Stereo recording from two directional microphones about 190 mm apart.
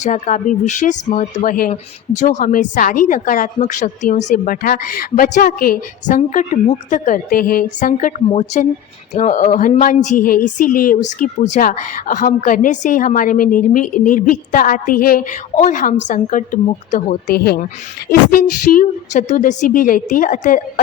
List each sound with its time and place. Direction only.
0.0 s a woman's voice: 40° left (ahead or behind)
1.7 s a woman's voice: 40° left (ahead or behind)
17.3 s a woman's voice: 55° left (ahead or behind)